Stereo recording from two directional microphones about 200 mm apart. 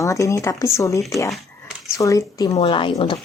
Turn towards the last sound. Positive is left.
turn(degrees=25)  # may be behind; listen again after turning